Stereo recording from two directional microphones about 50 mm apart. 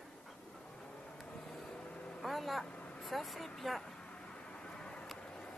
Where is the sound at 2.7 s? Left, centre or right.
Left.